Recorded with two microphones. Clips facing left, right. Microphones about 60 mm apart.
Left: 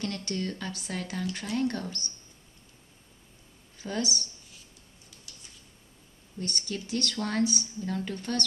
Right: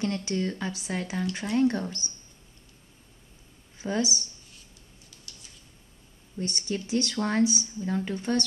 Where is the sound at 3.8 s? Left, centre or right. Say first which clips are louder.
Right 4 dB; centre.